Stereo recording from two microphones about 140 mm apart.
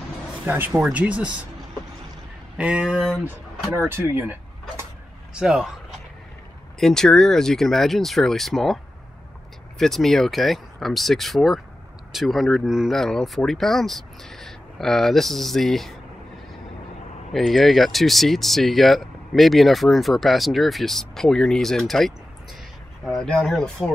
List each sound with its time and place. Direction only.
0.5 s speech: 10° right (ahead or behind)
2.5 s speech: 10° right (ahead or behind)
3.7 s speech: 20° right (ahead or behind)
5.3 s speech: 5° right (ahead or behind)
9.8 s speech: centre (ahead or behind)
17.3 s speech: centre (ahead or behind)
23.2 s speech: 5° left (ahead or behind)